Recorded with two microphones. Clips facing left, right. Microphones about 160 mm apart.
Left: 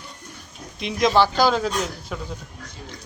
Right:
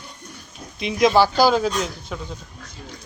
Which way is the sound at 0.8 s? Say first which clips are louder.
Right 2 dB; centre (ahead or behind).